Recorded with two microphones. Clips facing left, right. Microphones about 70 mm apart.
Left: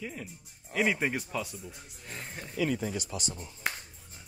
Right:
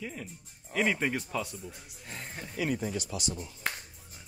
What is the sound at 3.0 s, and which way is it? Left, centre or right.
Speech, left.